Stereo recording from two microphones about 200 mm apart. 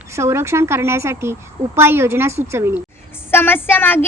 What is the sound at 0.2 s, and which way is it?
A woman's voice, 15° right (ahead or behind).